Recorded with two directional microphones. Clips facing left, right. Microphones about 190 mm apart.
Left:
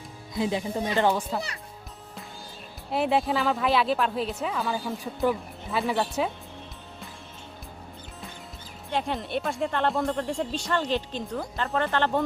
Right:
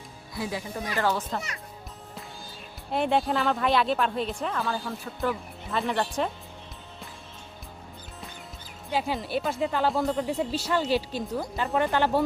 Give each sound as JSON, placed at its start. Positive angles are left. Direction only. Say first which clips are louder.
{"t": 0.3, "sound": "speech", "louder": "left 5 dB", "side_deg": 20}
{"t": 2.9, "sound": "speech", "louder": "even", "side_deg": 0}
{"t": 5.7, "sound": "speech", "louder": "left 1 dB", "side_deg": 5}
{"t": 8.9, "sound": "speech", "louder": "right 1 dB", "side_deg": -5}